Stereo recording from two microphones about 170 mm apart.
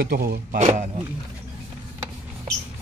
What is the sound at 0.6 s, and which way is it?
Speech, 45° right (ahead or behind).